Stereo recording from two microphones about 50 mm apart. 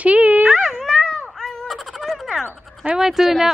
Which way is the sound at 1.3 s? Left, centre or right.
Centre.